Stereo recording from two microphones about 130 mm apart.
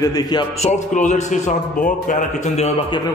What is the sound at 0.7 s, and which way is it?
A man's voice, 70° left (ahead or behind).